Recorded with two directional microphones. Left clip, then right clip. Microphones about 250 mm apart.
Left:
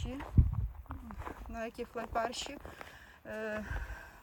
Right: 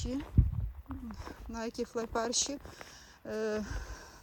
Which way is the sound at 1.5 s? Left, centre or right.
Centre.